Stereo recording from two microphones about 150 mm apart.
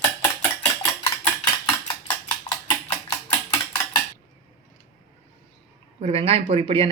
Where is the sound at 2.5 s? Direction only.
30° left (ahead or behind).